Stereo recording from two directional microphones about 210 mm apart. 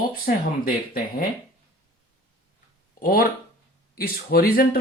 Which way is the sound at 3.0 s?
45° left (ahead or behind).